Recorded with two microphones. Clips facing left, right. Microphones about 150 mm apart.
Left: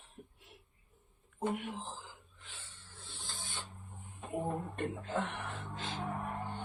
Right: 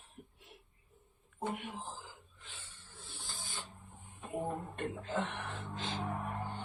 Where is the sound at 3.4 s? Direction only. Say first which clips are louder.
Left 1 dB; centre (ahead or behind).